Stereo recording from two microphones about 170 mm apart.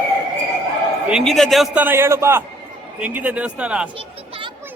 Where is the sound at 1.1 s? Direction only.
Centre (ahead or behind).